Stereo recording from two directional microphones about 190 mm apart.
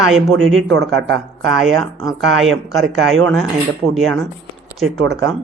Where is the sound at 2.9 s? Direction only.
90° right.